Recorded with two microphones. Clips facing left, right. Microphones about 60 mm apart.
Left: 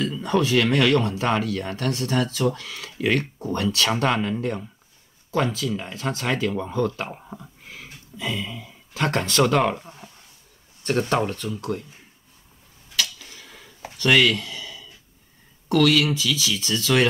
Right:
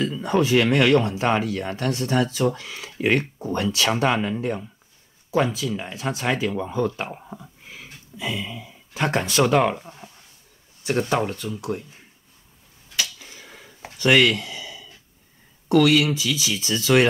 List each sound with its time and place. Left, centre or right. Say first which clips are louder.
0.2 s speech: right 1 dB; centre
7.1 s a sound: right 1 dB; centre
8.2 s speech: even; centre
9.6 s speech: right 1 dB; centre
12.9 s a sound: left 1 dB; right
15.7 s speech: right 2 dB; right